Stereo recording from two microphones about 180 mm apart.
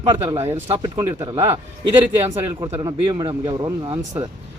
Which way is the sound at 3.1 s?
25° right (ahead or behind).